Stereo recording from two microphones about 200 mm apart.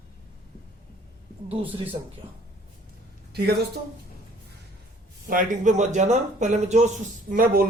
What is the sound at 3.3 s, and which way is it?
Speech, 50° right (ahead or behind).